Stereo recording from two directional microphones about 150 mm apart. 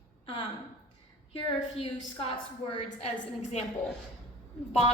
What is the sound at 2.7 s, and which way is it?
Speech, 45° left (ahead or behind).